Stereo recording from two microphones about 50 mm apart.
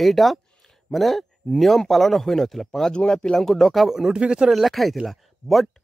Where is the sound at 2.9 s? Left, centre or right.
Centre.